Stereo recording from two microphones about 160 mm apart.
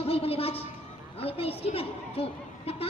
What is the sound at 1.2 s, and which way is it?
A woman's voice, 35° left (ahead or behind).